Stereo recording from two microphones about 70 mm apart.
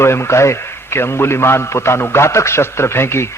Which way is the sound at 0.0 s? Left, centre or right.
Left.